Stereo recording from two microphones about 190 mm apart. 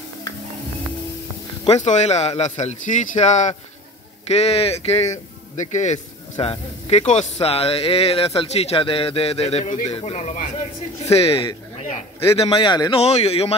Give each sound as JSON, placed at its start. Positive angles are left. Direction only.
{"t": 1.7, "sound": "speech", "side_deg": 40}
{"t": 6.3, "sound": "speech", "side_deg": 20}
{"t": 6.9, "sound": "speech", "side_deg": 35}